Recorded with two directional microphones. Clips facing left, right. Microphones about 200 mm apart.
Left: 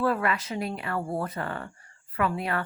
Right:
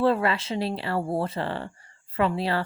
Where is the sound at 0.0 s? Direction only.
30° right (ahead or behind).